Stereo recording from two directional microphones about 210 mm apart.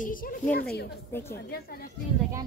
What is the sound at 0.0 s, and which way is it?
Speech, 40° left (ahead or behind).